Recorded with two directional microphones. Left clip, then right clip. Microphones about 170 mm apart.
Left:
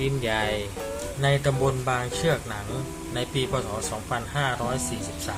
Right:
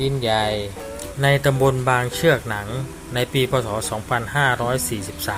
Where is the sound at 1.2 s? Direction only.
40° right (ahead or behind).